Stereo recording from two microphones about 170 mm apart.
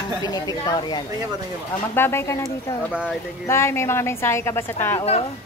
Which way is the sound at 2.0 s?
15° left (ahead or behind).